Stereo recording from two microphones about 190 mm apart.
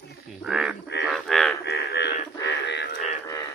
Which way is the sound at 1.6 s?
60° left (ahead or behind).